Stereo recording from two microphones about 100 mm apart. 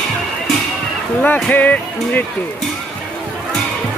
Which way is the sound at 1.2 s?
15° left (ahead or behind).